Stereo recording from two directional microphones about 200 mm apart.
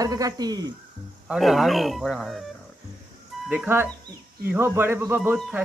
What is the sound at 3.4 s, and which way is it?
Speech, 10° right (ahead or behind).